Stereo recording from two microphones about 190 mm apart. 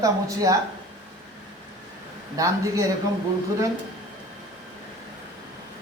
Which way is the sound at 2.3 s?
15° right (ahead or behind).